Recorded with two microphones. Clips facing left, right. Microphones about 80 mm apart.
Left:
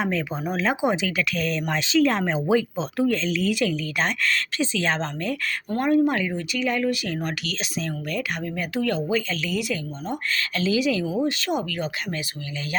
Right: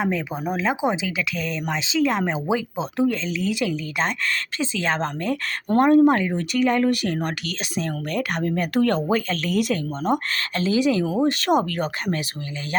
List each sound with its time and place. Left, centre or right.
0.0 s speech: centre; by 10.2 s right
10.6 s speech: right